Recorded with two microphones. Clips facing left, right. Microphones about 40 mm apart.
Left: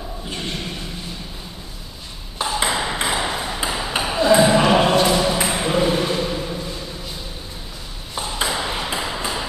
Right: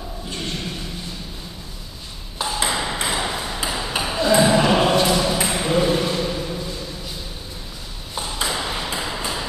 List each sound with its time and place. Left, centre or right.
0.3 s a sound: centre
2.3 s ping: centre
8.1 s ping: centre